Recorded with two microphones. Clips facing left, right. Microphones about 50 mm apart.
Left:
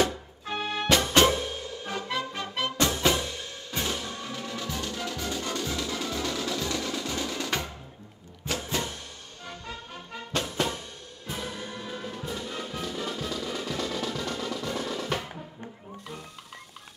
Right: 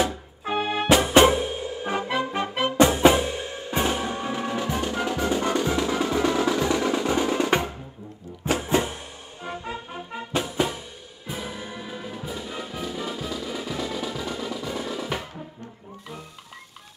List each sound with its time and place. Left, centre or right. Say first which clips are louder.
0.0 s music: right 1 dB; centre